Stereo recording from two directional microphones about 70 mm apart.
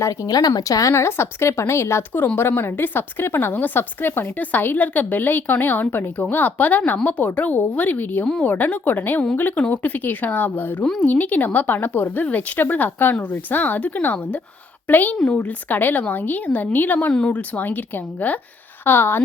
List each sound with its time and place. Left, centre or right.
0.0 s speech: left
0.3 s speech: left
0.9 s a woman's voice: left